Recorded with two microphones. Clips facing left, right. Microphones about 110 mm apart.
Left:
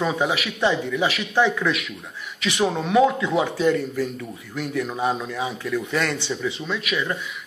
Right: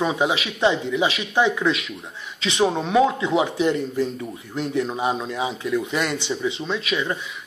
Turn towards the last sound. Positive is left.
turn(degrees=-20)  # may be behind; listen again after turning